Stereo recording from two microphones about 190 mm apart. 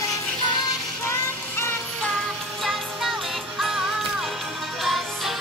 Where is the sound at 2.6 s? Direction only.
Centre (ahead or behind).